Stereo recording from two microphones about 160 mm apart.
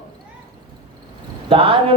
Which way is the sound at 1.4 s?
35° right (ahead or behind).